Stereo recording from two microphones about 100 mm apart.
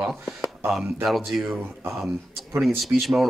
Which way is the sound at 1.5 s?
25° right (ahead or behind).